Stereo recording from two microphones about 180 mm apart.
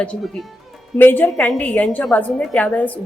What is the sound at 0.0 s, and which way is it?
A woman's voice, 5° left (ahead or behind).